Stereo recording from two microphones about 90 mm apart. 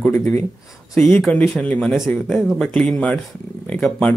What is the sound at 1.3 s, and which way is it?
Speech, 15° left (ahead or behind).